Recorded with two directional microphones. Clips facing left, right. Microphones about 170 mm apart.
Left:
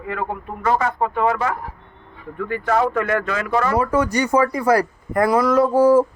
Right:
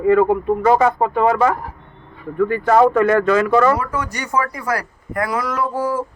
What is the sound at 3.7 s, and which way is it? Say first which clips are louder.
Speech: left 5 dB; 25° left (ahead or behind).